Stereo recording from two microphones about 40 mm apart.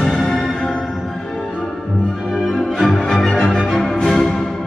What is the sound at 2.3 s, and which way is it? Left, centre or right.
Music, centre.